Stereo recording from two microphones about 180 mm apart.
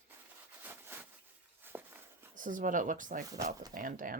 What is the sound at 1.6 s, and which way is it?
Walk, 10° right (ahead or behind).